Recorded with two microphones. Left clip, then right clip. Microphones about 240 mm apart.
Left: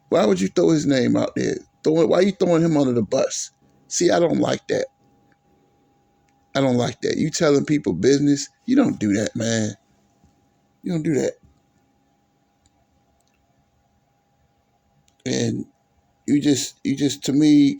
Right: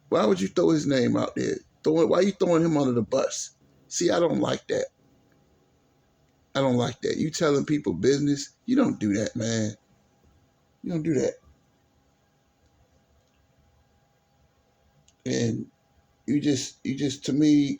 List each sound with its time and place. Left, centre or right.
0.1 s speech: left
6.5 s speech: left
10.8 s speech: left
15.2 s speech: left